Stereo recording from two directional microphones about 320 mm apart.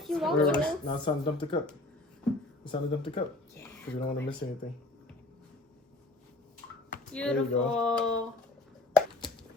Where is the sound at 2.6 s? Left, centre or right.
Centre.